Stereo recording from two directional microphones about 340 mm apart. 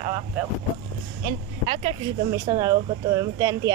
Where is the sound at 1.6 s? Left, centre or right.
Centre.